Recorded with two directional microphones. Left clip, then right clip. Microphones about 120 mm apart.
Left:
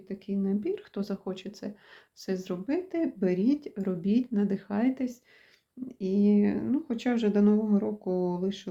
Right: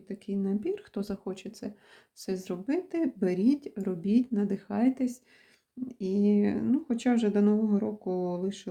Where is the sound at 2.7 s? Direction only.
40° right (ahead or behind).